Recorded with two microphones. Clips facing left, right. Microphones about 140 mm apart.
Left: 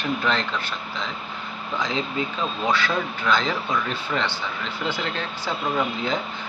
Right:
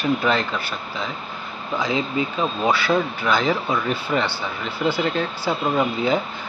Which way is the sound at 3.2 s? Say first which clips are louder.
Right 1 dB; 10° right (ahead or behind).